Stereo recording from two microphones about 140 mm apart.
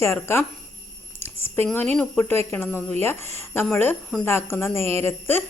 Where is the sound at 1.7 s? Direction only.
10° left (ahead or behind).